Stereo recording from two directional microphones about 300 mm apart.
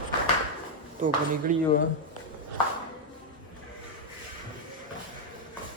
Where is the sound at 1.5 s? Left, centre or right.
Right.